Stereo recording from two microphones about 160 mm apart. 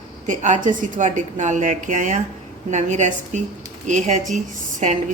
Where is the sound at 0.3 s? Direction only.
50° right (ahead or behind).